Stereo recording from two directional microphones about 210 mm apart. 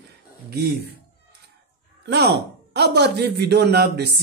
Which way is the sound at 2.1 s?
50° right (ahead or behind).